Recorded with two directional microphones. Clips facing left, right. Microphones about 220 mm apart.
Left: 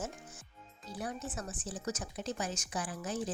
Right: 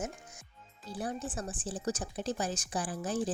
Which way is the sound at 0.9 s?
30° right (ahead or behind).